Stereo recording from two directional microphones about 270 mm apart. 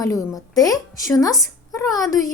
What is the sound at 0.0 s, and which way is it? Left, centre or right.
A woman's voice, centre.